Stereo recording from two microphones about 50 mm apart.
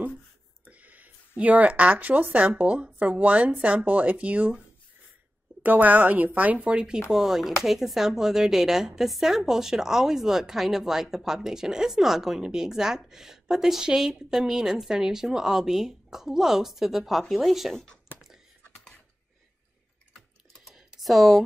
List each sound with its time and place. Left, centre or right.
0.7 s a woman's voice: right
5.6 s a woman's voice: right
7.1 s a woman's voice: centre
20.7 s typing: centre